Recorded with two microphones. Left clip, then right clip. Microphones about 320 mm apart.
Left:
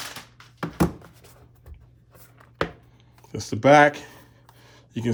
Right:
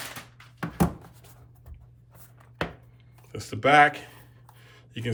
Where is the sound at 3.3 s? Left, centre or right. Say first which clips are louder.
Left 3 dB; centre.